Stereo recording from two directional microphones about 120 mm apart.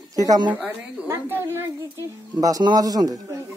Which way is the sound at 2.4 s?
30° right (ahead or behind).